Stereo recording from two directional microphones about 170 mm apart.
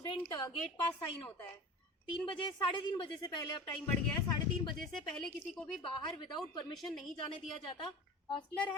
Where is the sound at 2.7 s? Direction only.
30° left (ahead or behind).